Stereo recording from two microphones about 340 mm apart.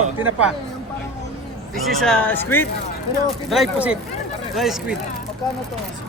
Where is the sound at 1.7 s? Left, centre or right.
Centre.